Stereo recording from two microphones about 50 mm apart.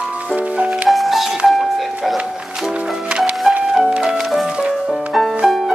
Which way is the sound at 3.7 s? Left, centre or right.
Centre.